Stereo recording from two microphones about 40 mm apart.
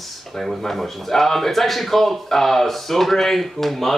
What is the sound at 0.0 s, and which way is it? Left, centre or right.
Speech, centre.